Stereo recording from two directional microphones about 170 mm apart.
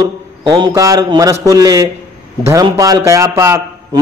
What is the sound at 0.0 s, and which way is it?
A man's voice, 25° right (ahead or behind).